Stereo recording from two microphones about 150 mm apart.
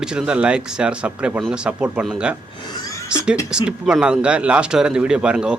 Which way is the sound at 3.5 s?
5° right (ahead or behind).